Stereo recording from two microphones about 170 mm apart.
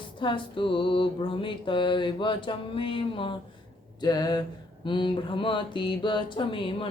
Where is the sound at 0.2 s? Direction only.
30° left (ahead or behind).